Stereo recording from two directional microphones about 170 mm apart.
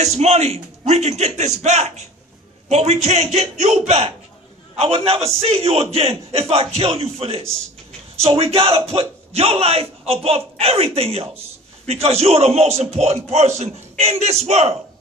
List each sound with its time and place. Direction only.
0.0 s a man's voice: 40° right (ahead or behind)